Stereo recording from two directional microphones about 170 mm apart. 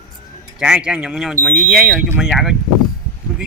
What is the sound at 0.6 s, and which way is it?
Speech, 5° right (ahead or behind).